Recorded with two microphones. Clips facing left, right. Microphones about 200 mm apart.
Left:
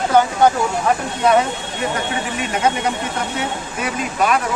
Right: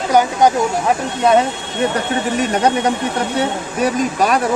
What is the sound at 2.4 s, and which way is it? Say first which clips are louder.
Speech: right 3 dB; 35° right (ahead or behind).